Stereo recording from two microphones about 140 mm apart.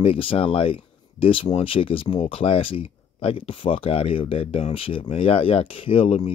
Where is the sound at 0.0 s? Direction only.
40° left (ahead or behind).